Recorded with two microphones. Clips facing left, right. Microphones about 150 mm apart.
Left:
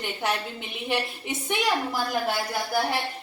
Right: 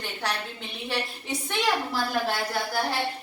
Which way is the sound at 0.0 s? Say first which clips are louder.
Left 3 dB; 20° left (ahead or behind).